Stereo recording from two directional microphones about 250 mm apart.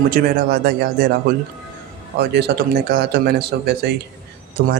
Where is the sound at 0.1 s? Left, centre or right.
Right.